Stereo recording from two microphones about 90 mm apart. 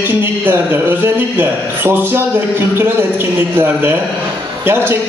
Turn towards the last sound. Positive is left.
turn(degrees=-25)  # may be behind; listen again after turning